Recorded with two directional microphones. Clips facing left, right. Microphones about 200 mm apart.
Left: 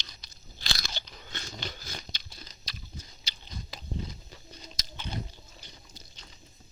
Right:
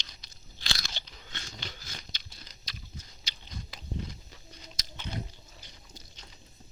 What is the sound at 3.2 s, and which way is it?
Biting, 30° left (ahead or behind).